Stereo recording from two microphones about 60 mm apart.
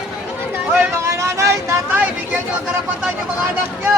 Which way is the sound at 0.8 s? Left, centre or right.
Right.